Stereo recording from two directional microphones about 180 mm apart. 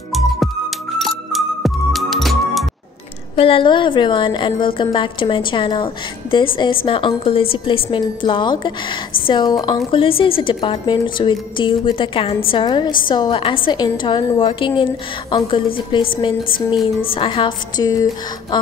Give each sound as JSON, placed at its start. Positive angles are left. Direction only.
{"t": 0.1, "sound": "music", "side_deg": 0}
{"t": 3.3, "sound": "speech", "side_deg": 30}